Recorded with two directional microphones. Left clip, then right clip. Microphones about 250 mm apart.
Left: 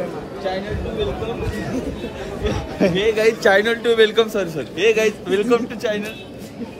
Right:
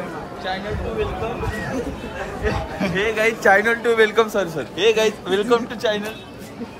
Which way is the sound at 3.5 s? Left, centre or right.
Centre.